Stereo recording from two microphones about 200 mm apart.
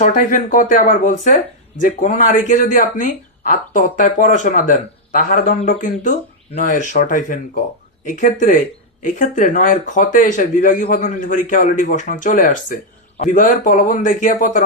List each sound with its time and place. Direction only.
0.0 s speech: 40° left (ahead or behind)